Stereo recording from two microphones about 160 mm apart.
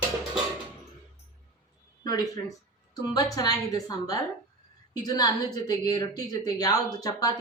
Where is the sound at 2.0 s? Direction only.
25° left (ahead or behind).